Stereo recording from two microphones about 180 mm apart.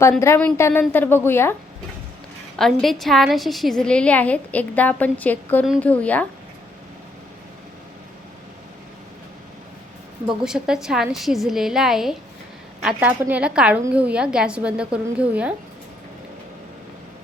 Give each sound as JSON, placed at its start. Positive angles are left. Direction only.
{"t": 0.2, "sound": "a woman's voice", "side_deg": 10}
{"t": 2.6, "sound": "a woman's voice", "side_deg": 0}
{"t": 10.2, "sound": "a woman's voice", "side_deg": -5}